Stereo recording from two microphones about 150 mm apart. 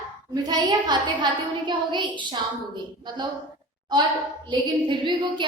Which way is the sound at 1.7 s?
30° right (ahead or behind).